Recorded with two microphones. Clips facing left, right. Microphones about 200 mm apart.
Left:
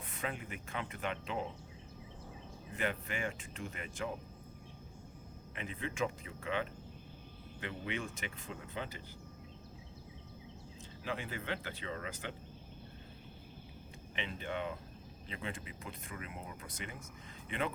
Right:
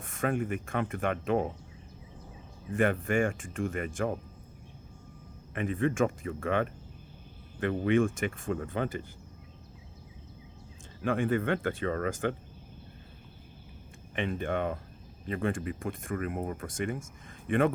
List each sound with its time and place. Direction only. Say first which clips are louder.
0.0 s speech: right 11 dB; 50° right (ahead or behind)
2.7 s speech: right 12 dB; 50° right (ahead or behind)
5.5 s speech: right 11 dB; 50° right (ahead or behind)
11.0 s speech: right 13 dB; 50° right (ahead or behind)
14.2 s speech: right 9 dB; 50° right (ahead or behind)